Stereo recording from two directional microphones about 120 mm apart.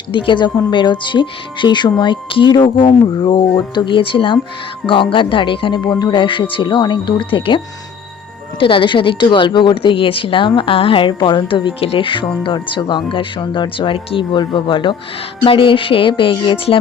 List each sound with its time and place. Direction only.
0.1 s a woman's voice: 40° left (ahead or behind)